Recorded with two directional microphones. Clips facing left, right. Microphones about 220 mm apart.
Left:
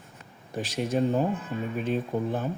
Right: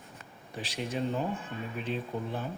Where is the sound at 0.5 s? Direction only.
45° left (ahead or behind).